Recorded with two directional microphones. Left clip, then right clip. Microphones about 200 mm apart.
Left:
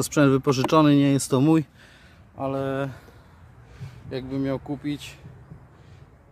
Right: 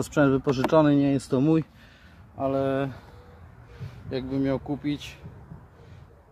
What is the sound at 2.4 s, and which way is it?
Speech, 15° left (ahead or behind).